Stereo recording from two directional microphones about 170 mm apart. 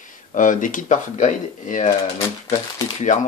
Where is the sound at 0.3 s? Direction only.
50° left (ahead or behind).